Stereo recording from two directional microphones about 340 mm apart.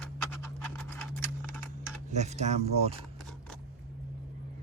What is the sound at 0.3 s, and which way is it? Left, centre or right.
Scratch, centre.